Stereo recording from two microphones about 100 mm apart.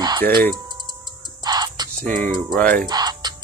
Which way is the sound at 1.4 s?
45° right (ahead or behind).